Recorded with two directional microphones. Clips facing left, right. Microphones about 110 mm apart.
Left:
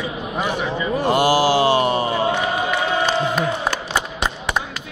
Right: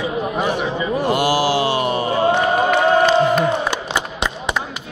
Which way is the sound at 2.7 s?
50° right (ahead or behind).